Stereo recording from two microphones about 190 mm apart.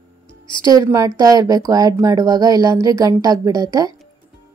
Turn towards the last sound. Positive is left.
turn(degrees=-20)  # may be behind; listen again after turning